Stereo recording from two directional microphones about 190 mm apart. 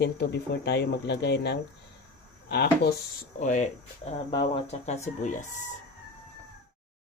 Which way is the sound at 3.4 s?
40° left (ahead or behind).